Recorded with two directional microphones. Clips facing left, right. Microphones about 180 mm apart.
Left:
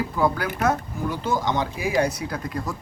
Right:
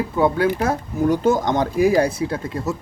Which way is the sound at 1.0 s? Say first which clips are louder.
Right 8 dB; 45° right (ahead or behind).